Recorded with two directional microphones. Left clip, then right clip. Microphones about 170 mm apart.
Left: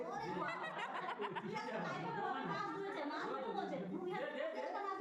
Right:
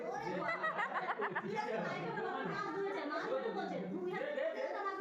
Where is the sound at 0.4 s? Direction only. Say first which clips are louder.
Right 6 dB; 40° left (ahead or behind).